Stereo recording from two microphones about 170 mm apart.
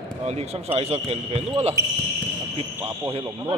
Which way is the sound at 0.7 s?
40° right (ahead or behind).